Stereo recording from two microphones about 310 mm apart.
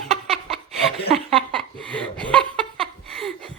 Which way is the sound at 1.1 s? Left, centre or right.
Centre.